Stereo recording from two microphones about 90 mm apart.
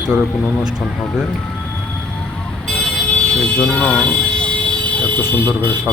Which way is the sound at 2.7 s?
10° left (ahead or behind).